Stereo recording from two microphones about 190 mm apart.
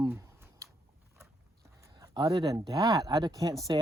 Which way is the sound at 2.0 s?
20° right (ahead or behind).